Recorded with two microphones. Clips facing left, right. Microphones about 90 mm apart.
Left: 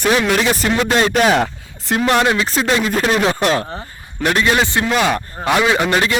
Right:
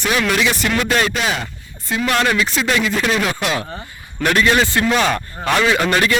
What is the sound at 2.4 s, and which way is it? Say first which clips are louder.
A man's voice: left 1 dB; 35° left (ahead or behind).